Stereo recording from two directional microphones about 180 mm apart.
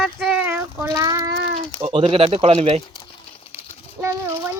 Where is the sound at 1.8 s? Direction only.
30° right (ahead or behind).